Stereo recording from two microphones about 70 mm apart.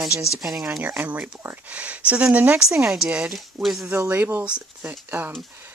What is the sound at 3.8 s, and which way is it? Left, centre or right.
Speech, right.